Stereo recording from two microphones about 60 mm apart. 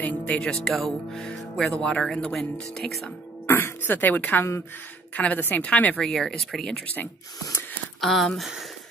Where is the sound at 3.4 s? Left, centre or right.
Left.